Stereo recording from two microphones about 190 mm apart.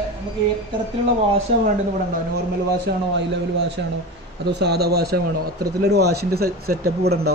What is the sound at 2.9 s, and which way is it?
Speech, 65° right (ahead or behind).